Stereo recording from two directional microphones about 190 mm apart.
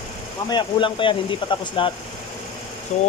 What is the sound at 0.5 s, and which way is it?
Speech, 25° left (ahead or behind).